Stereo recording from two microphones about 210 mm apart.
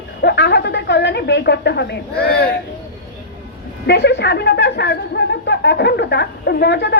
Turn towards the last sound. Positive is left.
turn(degrees=55)  # may be behind; listen again after turning